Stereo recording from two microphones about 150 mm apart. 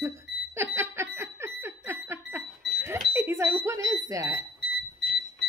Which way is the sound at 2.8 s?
15° right (ahead or behind).